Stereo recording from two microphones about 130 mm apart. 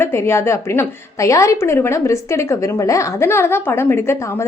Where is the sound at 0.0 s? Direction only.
20° left (ahead or behind).